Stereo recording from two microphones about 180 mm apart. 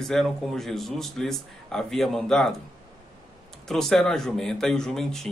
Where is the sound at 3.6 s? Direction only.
Centre (ahead or behind).